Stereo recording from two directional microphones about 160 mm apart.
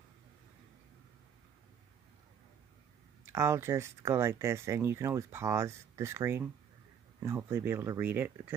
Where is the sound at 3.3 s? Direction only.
15° right (ahead or behind).